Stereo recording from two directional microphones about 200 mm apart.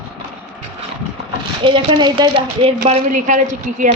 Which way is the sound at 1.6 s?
25° right (ahead or behind).